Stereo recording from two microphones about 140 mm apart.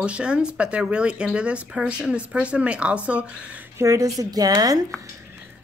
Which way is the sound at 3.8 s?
25° right (ahead or behind).